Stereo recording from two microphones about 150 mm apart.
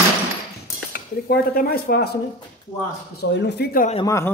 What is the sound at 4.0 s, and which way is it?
Speech, 20° left (ahead or behind).